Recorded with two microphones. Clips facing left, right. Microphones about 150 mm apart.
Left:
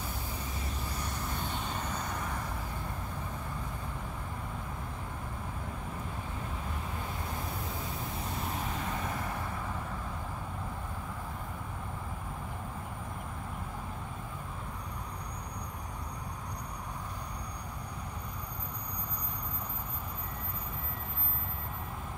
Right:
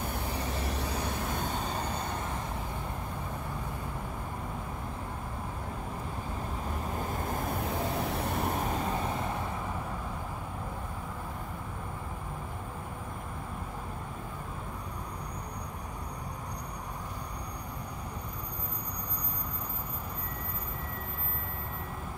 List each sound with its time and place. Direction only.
0.0 s vehicle: 65° right (ahead or behind)
1.4 s vehicle: 40° right (ahead or behind)
7.1 s vehicle: 50° right (ahead or behind)
8.8 s vehicle: 25° right (ahead or behind)